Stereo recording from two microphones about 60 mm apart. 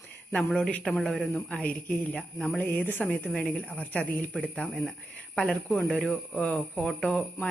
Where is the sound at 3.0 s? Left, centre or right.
Centre.